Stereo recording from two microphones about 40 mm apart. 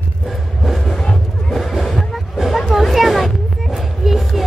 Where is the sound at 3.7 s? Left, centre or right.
Centre.